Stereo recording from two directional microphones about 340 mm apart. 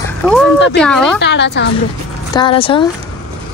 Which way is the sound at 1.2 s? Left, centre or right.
Left.